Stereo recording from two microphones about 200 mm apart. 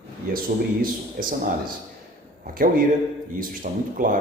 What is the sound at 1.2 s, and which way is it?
Speech, 45° right (ahead or behind).